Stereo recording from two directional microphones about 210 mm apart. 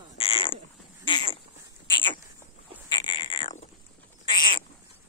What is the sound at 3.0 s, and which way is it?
Frog, 25° left (ahead or behind).